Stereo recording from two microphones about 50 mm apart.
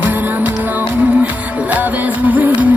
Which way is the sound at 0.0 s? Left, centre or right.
Right.